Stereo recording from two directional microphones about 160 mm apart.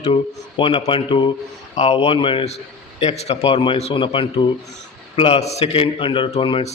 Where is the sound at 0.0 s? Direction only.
35° left (ahead or behind).